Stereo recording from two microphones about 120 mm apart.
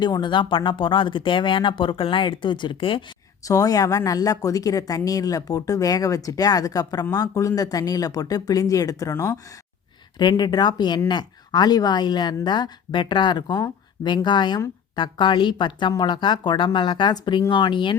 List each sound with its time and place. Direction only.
0.0 s speech: 40° left (ahead or behind)
3.4 s speech: 30° left (ahead or behind)
10.2 s speech: 35° left (ahead or behind)